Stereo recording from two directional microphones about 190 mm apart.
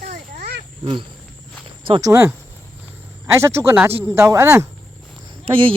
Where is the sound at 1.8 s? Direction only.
25° right (ahead or behind).